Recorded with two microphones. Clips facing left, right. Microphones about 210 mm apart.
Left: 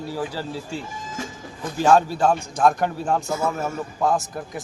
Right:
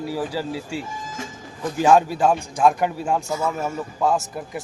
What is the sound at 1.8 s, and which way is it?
Speech, 15° right (ahead or behind).